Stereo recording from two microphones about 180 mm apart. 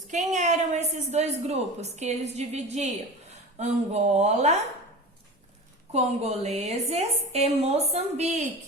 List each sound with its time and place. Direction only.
0.1 s a woman's voice: 40° right (ahead or behind)
5.9 s a woman's voice: 35° right (ahead or behind)